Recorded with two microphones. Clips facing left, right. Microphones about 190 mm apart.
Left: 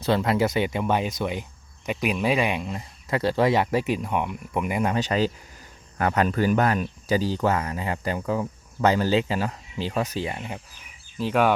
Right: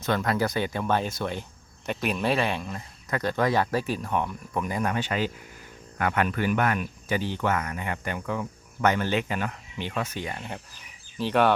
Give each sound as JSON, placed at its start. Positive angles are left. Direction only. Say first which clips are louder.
{"t": 0.0, "sound": "speech", "louder": "left 4 dB", "side_deg": 25}
{"t": 4.9, "sound": "speech", "louder": "left 4 dB", "side_deg": 40}
{"t": 11.2, "sound": "speech", "louder": "left 1 dB", "side_deg": 5}